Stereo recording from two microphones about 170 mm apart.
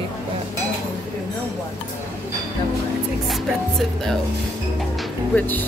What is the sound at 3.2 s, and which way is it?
Speech, centre (ahead or behind).